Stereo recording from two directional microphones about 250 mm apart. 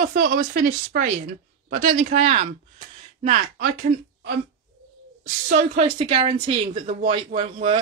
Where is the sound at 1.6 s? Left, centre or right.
Right.